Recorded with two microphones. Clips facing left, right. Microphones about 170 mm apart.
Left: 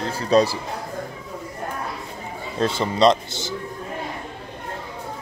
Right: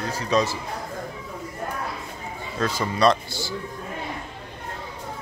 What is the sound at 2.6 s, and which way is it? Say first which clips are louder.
Speech: left 3 dB; 25° left (ahead or behind).